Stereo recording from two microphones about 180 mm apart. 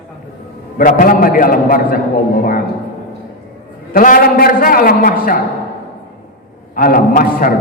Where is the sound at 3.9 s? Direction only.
50° left (ahead or behind).